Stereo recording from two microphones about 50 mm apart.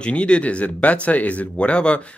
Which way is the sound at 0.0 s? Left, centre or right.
Left.